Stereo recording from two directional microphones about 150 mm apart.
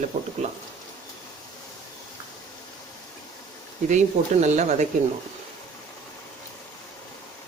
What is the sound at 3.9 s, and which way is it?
Speech, 50° right (ahead or behind).